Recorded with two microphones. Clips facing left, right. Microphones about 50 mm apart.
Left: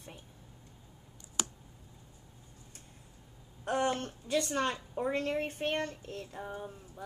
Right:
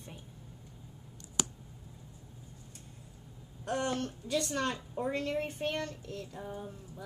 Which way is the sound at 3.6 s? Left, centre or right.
Left.